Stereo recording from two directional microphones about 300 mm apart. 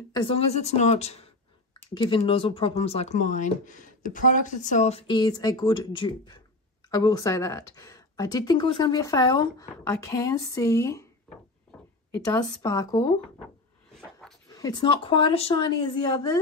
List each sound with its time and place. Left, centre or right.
0.1 s speech: centre
14.5 s speech: centre